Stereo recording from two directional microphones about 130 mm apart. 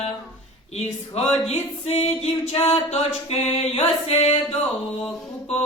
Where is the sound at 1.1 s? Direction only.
50° left (ahead or behind).